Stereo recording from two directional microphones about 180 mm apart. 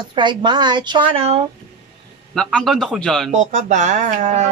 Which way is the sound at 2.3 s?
5° left (ahead or behind).